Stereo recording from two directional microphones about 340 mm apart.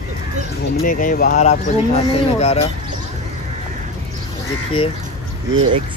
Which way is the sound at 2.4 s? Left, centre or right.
Centre.